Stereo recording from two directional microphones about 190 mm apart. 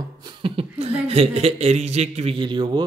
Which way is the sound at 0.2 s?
25° right (ahead or behind).